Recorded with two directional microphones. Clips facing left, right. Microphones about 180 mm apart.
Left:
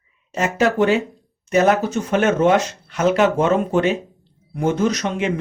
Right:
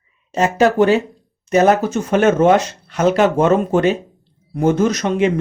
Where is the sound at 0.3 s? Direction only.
35° right (ahead or behind).